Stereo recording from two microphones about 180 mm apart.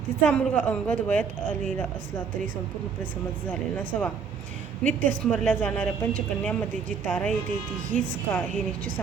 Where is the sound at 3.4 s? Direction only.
10° left (ahead or behind).